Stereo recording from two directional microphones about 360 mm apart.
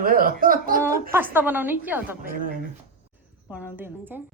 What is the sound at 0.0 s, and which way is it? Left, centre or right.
Speech, right.